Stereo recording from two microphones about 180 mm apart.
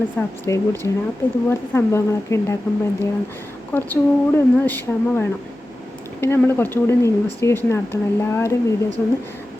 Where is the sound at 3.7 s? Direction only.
10° left (ahead or behind).